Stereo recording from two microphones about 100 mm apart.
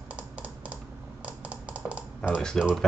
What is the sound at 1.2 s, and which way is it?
Typing, 10° right (ahead or behind).